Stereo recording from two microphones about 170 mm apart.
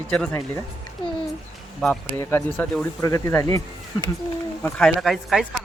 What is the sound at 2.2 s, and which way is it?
Speech, 15° left (ahead or behind).